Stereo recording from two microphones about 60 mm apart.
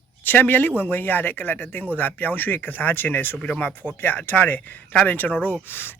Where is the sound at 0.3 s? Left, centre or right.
Left.